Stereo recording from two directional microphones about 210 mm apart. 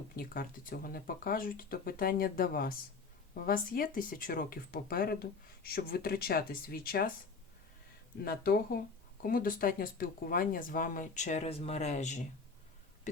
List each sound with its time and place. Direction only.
0.2 s speech: 45° left (ahead or behind)
8.2 s speech: 45° left (ahead or behind)